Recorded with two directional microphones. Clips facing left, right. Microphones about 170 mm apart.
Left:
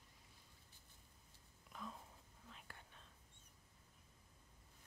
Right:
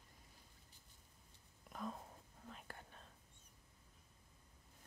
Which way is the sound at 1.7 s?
45° right (ahead or behind).